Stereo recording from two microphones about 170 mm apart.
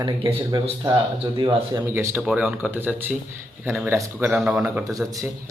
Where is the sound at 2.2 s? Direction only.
5° right (ahead or behind).